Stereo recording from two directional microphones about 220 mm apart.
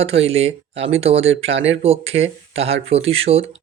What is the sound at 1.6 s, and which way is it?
Speech, 55° right (ahead or behind).